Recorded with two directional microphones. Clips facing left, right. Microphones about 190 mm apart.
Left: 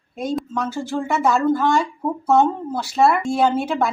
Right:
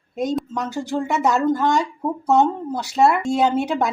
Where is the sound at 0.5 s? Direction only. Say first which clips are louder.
Even; 15° right (ahead or behind).